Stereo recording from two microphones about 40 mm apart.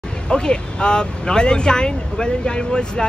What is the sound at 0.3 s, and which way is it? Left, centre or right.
Speech, left.